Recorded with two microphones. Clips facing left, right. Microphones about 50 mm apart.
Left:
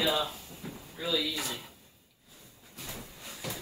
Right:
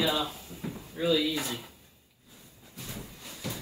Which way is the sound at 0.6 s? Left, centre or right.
Right.